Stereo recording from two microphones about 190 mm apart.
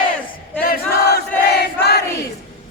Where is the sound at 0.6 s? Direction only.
50° left (ahead or behind).